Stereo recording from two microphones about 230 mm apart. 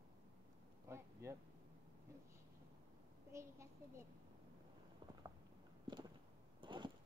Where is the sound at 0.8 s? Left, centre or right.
Centre.